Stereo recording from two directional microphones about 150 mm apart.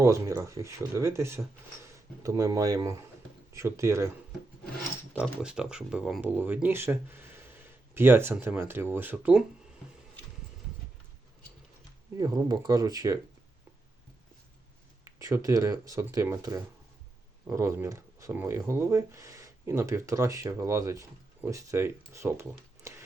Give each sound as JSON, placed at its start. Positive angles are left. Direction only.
{"t": 0.0, "sound": "speech", "side_deg": -20}
{"t": 5.2, "sound": "speech", "side_deg": -5}
{"t": 12.1, "sound": "speech", "side_deg": -25}
{"t": 15.0, "sound": "speech", "side_deg": -20}